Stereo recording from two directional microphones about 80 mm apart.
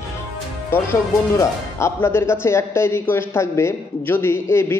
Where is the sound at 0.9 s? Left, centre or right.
Left.